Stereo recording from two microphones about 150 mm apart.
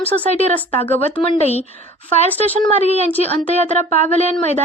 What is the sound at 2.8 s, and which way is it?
A woman's voice, 45° left (ahead or behind).